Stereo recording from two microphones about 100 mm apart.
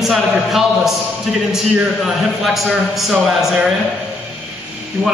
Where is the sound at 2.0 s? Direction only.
Centre (ahead or behind).